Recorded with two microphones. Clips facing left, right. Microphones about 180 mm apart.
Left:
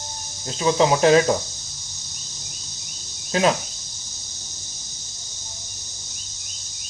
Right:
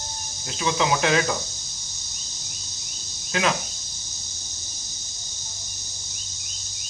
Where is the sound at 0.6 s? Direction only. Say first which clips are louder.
Left 6 dB; 35° left (ahead or behind).